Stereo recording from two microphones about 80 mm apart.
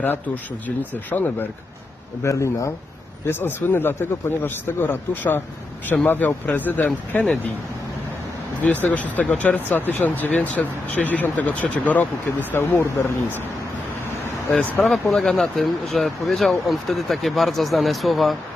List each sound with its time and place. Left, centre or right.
1.1 s speech: left
2.2 s speech: left
3.2 s speech: left
8.6 s speech: left
14.5 s speech: centre
15.1 s speech: centre